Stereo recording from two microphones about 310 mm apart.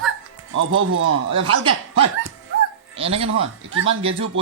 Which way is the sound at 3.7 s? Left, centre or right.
Right.